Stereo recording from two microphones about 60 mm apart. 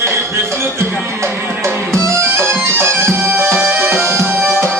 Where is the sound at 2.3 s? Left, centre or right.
Right.